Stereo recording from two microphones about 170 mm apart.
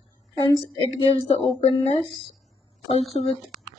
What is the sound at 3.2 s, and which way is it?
Speech, centre (ahead or behind).